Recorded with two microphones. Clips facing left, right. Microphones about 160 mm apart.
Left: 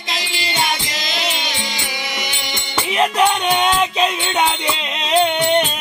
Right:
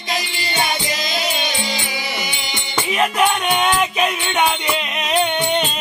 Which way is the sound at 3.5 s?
25° left (ahead or behind).